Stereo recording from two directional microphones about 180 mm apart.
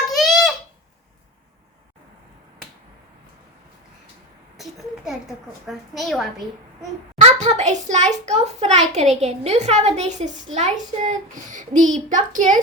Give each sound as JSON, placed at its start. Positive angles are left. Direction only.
{"t": 0.2, "sound": "a sound", "side_deg": 0}
{"t": 4.5, "sound": "a child's voice", "side_deg": 0}
{"t": 7.2, "sound": "a child's voice", "side_deg": -40}